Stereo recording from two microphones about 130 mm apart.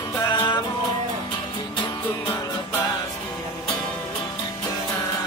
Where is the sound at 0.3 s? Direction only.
35° left (ahead or behind).